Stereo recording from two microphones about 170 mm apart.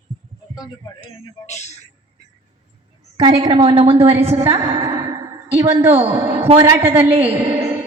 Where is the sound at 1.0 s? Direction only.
40° left (ahead or behind).